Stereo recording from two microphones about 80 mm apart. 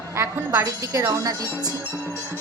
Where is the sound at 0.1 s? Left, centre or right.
Right.